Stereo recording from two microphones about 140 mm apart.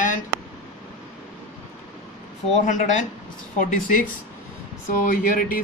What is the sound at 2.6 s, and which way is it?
Speech, 65° left (ahead or behind).